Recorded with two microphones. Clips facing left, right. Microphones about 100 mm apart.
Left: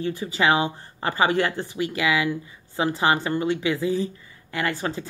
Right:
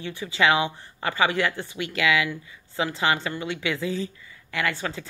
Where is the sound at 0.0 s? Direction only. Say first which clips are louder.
Left 1 dB; 30° left (ahead or behind).